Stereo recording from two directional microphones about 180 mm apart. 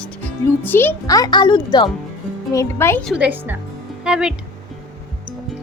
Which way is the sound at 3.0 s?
5° right (ahead or behind).